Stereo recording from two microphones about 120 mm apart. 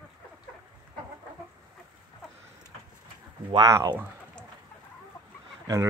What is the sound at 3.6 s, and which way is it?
Speech, 25° right (ahead or behind).